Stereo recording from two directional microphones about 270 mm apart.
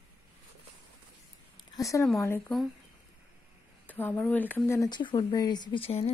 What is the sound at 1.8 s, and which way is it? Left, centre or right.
Speech, centre.